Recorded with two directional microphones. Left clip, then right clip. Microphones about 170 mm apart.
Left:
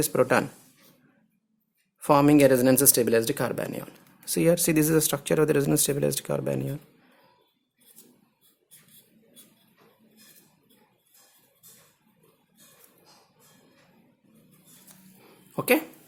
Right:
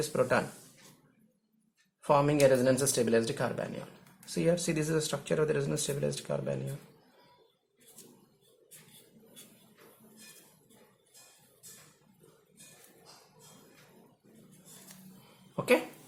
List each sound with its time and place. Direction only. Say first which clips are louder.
0.0 s speech: left 6 dB; 70° left (ahead or behind)
2.0 s speech: left 6 dB; 70° left (ahead or behind)
15.5 s a sound: left 4 dB; 60° left (ahead or behind)